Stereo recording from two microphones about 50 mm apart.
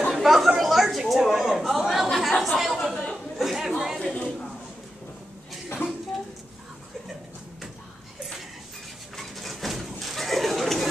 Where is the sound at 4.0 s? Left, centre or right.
Left.